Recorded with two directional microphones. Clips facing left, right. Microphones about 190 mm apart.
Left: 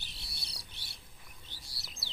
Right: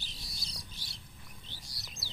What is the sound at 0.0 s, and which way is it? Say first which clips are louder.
Bird: right 3 dB; 65° left (ahead or behind).